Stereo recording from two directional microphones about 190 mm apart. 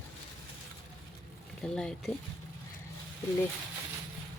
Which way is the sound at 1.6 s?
5° left (ahead or behind).